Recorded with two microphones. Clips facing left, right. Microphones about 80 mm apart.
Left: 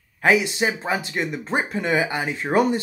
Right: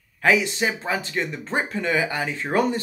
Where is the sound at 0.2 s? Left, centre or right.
Centre.